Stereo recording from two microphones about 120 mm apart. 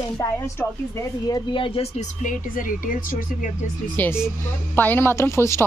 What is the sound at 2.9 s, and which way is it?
Speech, 90° left.